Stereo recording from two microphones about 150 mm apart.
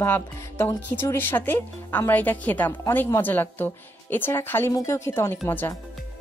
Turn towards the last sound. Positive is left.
turn(degrees=15)  # may be behind; listen again after turning